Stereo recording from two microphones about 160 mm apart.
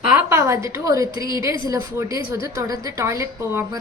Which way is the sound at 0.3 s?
15° right (ahead or behind).